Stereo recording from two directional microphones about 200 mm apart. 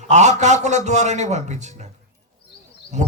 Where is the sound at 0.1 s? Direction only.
35° right (ahead or behind).